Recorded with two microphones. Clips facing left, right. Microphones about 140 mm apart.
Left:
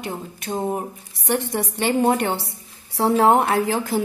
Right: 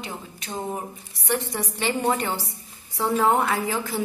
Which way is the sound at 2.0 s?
60° left (ahead or behind).